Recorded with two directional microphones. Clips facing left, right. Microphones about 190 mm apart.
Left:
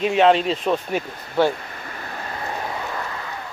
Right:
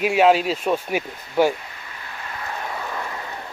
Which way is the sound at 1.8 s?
50° left (ahead or behind).